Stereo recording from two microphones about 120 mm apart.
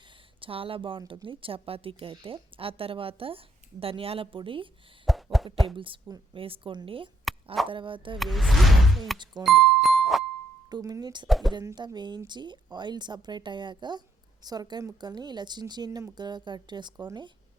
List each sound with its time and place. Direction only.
0.3 s speech: 50° right (ahead or behind)
5.0 s plop: centre (ahead or behind)
5.7 s speech: 45° right (ahead or behind)
8.2 s speech: centre (ahead or behind)
9.1 s a woman's voice: 40° right (ahead or behind)
9.4 s music: centre (ahead or behind)
10.7 s a woman's voice: 35° right (ahead or behind)
11.3 s speech: centre (ahead or behind)
11.6 s a woman's voice: 30° right (ahead or behind)